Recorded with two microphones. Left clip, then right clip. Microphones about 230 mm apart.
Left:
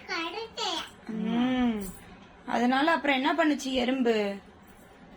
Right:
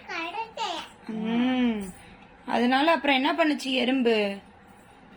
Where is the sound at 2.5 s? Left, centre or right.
Right.